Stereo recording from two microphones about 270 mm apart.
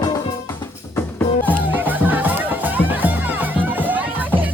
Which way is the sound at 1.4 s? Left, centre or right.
Centre.